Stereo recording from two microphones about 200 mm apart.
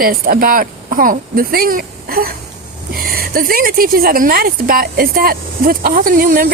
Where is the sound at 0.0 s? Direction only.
45° right (ahead or behind).